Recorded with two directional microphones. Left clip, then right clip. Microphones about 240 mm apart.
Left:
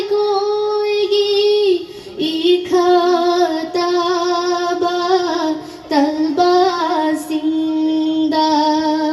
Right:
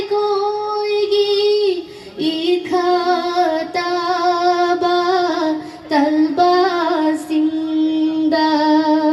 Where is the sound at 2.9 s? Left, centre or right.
Right.